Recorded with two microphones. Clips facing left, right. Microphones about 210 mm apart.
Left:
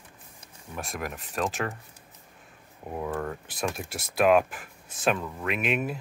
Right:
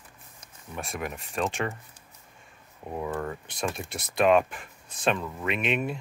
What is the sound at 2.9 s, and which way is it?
Speech, centre (ahead or behind).